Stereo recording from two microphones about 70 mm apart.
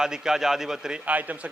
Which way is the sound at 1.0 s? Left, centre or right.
Right.